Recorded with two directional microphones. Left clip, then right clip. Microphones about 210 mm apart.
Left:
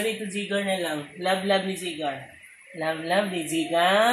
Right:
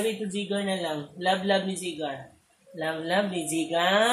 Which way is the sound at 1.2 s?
10° left (ahead or behind).